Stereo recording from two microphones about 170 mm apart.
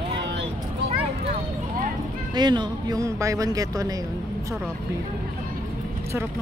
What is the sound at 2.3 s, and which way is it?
Speech, 25° right (ahead or behind).